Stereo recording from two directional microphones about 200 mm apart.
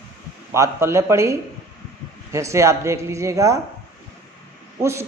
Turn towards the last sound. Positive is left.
turn(degrees=-15)  # may be behind; listen again after turning